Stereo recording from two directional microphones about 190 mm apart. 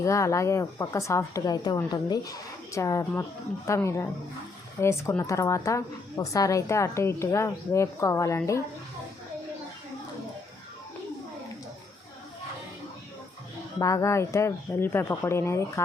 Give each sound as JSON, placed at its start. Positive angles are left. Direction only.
{"t": 0.0, "sound": "a woman's voice", "side_deg": 15}
{"t": 13.7, "sound": "a woman's voice", "side_deg": 15}